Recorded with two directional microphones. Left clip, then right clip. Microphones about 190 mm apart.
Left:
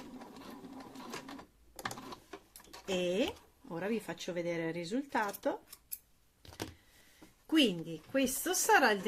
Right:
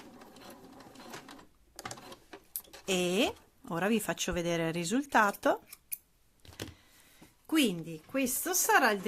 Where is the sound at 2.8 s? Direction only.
40° right (ahead or behind).